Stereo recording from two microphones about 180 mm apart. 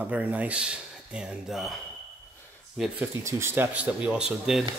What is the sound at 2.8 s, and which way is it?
Speech, centre (ahead or behind).